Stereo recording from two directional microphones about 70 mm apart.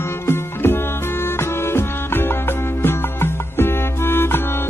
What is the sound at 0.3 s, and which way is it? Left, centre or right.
Music, left.